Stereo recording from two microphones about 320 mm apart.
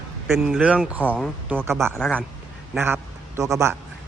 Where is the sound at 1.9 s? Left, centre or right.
Centre.